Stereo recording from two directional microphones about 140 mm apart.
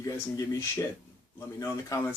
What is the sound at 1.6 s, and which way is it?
Speech, 20° left (ahead or behind).